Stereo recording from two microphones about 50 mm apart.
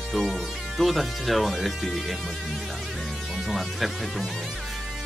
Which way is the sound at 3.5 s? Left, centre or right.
Centre.